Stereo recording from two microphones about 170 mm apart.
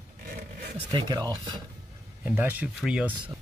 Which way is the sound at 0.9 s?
25° right (ahead or behind).